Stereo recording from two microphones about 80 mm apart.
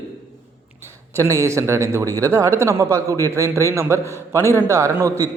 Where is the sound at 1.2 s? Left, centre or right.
Right.